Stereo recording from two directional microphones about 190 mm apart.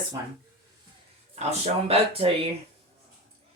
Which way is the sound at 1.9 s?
30° right (ahead or behind).